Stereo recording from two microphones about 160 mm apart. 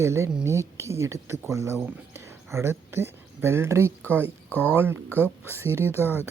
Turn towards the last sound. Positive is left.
turn(degrees=-15)  # may be behind; listen again after turning